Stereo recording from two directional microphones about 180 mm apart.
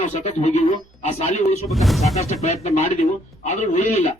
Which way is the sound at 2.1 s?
40° left (ahead or behind).